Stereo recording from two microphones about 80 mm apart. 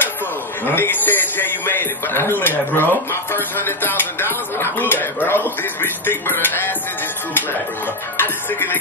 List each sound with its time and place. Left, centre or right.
0.7 s speech: left
8.2 s speech: left